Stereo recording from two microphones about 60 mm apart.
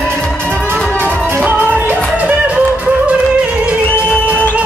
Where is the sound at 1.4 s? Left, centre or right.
Right.